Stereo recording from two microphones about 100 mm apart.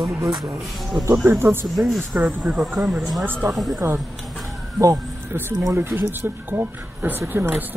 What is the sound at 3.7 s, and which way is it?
Speech, 20° right (ahead or behind).